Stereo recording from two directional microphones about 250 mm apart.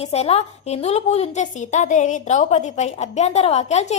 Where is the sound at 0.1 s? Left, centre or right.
Left.